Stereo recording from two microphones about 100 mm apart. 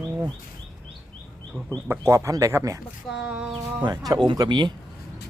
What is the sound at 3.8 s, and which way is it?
Speech, 45° right (ahead or behind).